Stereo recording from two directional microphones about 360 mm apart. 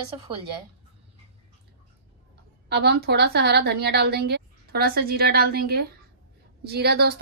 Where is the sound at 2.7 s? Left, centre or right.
Right.